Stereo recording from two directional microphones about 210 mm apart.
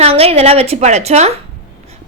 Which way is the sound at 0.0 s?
30° right (ahead or behind).